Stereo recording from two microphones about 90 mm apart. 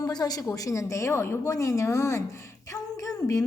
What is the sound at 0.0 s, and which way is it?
A woman's voice, 45° left (ahead or behind).